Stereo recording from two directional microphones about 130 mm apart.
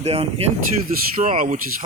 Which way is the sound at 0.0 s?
50° right (ahead or behind).